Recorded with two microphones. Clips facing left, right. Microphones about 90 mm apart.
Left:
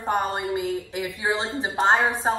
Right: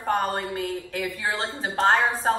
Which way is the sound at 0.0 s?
15° left (ahead or behind).